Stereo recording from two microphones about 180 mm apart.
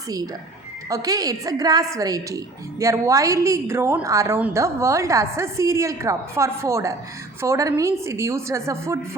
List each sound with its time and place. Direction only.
0.9 s a woman's voice: 20° right (ahead or behind)